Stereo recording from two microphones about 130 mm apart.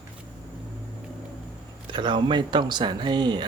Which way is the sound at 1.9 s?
40° right (ahead or behind).